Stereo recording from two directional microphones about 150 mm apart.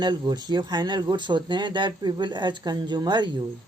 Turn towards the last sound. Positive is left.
turn(degrees=-30)  # may be behind; listen again after turning